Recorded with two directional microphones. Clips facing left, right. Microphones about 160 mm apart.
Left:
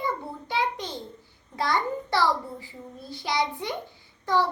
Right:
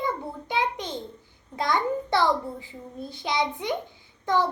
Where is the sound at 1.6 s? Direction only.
20° right (ahead or behind).